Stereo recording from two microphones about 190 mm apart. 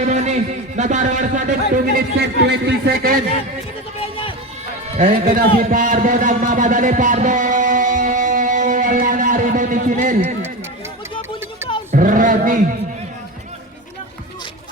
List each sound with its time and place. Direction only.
0.0 s speech: 35° right (ahead or behind)
2.4 s speech: 65° right (ahead or behind)
4.0 s run: 30° left (ahead or behind)
4.9 s speech: 40° right (ahead or behind)
5.6 s a sound: 45° right (ahead or behind)
11.9 s speech: 45° right (ahead or behind)